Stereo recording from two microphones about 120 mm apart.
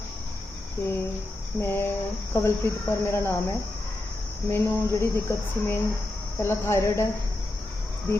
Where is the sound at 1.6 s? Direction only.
20° left (ahead or behind).